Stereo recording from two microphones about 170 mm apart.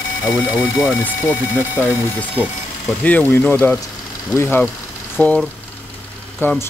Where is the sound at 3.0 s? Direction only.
10° left (ahead or behind).